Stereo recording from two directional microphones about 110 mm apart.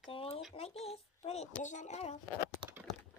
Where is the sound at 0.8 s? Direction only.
70° left (ahead or behind); by 2.1 s 90° left.